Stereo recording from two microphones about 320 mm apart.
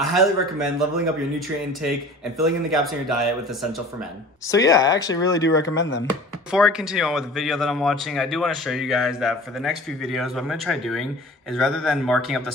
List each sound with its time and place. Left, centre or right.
0.0 s a man's voice: centre
4.5 s speech: centre
5.8 s speech: left
6.5 s a man's voice: centre